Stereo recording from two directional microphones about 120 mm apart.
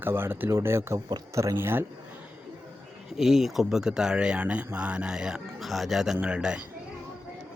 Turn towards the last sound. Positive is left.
turn(degrees=-10)  # may be behind; listen again after turning